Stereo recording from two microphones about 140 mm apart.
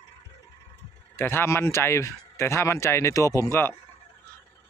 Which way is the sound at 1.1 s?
15° left (ahead or behind).